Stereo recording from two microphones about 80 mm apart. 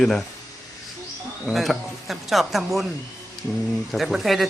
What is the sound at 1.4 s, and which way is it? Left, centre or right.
Speech, centre.